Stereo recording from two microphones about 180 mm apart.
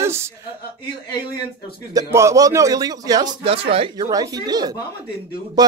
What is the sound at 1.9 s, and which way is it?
A man's voice, 15° right (ahead or behind).